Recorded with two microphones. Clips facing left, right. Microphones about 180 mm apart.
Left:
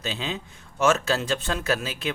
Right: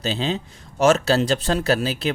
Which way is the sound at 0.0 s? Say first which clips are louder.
Right 7 dB; 35° right (ahead or behind).